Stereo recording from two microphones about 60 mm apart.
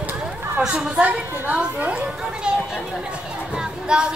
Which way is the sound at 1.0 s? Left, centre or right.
Right.